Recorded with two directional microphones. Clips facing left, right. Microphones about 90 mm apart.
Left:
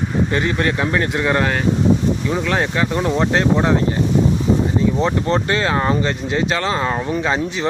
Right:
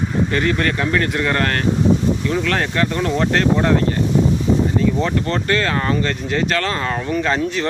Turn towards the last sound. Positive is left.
turn(degrees=15)  # may be behind; listen again after turning